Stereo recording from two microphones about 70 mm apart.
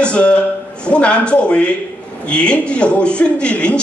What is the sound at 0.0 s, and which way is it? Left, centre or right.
A man's voice, centre.